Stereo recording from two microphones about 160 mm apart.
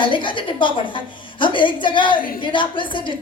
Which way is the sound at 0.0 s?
30° left (ahead or behind).